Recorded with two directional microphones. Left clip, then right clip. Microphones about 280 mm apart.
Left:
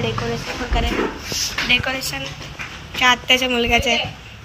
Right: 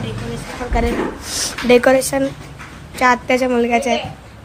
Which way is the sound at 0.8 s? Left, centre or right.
Centre.